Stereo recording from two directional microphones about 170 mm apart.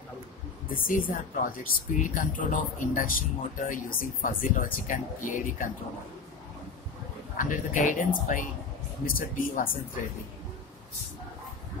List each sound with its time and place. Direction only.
0.7 s speech: 55° left (ahead or behind)
7.3 s speech: 50° left (ahead or behind)